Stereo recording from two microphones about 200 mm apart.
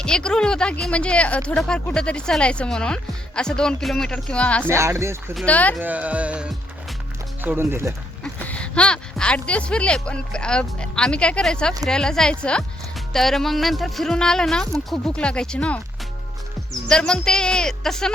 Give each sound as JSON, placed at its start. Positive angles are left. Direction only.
{"t": 0.0, "sound": "speech", "side_deg": 5}
{"t": 4.6, "sound": "speech", "side_deg": -15}
{"t": 5.3, "sound": "speech", "side_deg": 5}
{"t": 5.8, "sound": "speech", "side_deg": -5}
{"t": 8.2, "sound": "speech", "side_deg": 5}
{"t": 16.9, "sound": "speech", "side_deg": 5}